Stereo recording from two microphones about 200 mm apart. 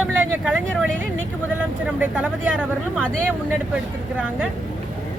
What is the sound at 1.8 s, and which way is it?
Speech, 5° right (ahead or behind).